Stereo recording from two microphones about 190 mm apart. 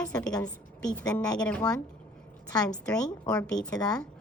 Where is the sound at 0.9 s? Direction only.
15° left (ahead or behind).